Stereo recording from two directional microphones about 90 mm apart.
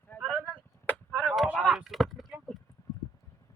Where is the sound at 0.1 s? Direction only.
25° left (ahead or behind).